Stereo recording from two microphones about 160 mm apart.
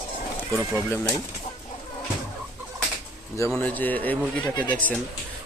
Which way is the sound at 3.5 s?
10° left (ahead or behind).